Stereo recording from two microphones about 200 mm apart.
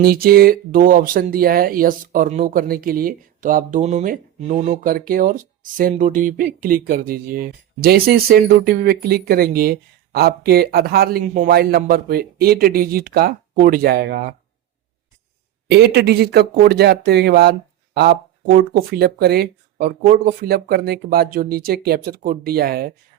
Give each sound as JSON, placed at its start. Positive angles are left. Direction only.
{"t": 0.0, "sound": "speech", "side_deg": -50}
{"t": 15.7, "sound": "speech", "side_deg": -55}